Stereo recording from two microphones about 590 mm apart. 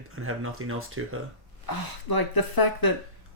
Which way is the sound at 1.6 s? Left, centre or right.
Left.